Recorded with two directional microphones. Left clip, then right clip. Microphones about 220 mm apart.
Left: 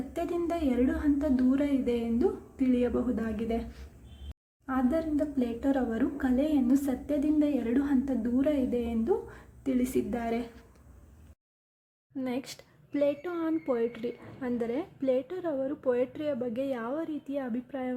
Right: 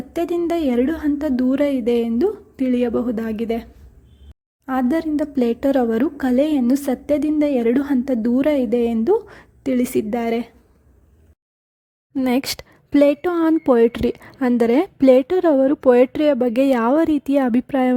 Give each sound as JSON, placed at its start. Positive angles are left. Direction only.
{"t": 0.1, "sound": "speech", "side_deg": -40}
{"t": 4.6, "sound": "speech", "side_deg": -40}
{"t": 12.1, "sound": "a woman's voice", "side_deg": -50}